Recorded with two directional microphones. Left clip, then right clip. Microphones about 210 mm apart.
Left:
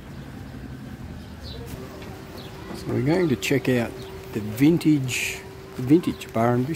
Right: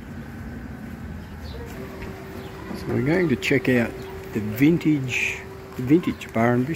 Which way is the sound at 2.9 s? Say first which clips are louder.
Even; 10° left (ahead or behind).